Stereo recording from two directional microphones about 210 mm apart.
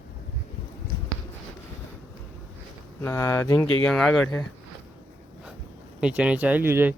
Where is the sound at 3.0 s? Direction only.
10° left (ahead or behind).